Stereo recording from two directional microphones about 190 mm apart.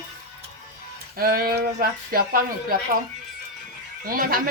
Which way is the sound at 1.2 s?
50° right (ahead or behind).